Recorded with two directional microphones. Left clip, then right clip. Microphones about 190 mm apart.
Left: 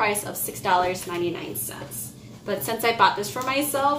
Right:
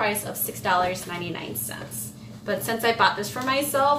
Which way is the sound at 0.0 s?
15° left (ahead or behind).